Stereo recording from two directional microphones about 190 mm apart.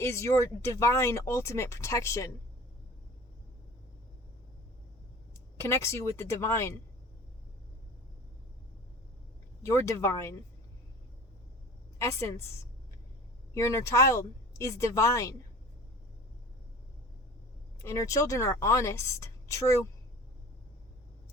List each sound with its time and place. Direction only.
0.0 s a woman's voice: 15° left (ahead or behind)
5.5 s a woman's voice: 15° left (ahead or behind)
9.6 s a woman's voice: 15° left (ahead or behind)
11.9 s a woman's voice: 15° left (ahead or behind)
13.5 s a woman's voice: 15° left (ahead or behind)
17.8 s a woman's voice: 15° left (ahead or behind)